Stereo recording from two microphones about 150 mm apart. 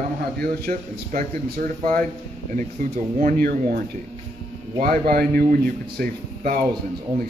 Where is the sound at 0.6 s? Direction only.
60° right (ahead or behind).